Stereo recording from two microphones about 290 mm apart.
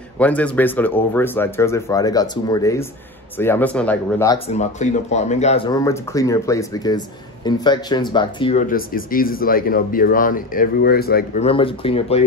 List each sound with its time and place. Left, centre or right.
0.2 s speech: centre
4.5 s speech: left
11.4 s speech: centre